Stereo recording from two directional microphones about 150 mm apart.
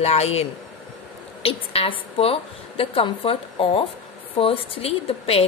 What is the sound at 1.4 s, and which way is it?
A woman's voice, 40° left (ahead or behind).